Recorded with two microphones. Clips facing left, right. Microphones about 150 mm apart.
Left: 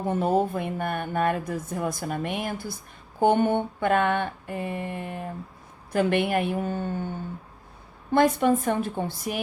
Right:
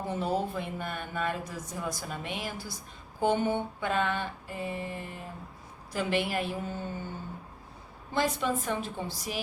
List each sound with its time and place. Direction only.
0.1 s speech: 50° left (ahead or behind)
8.1 s speech: 55° left (ahead or behind)